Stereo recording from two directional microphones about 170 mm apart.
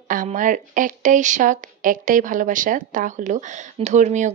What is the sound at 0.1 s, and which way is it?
A woman's voice, 50° right (ahead or behind).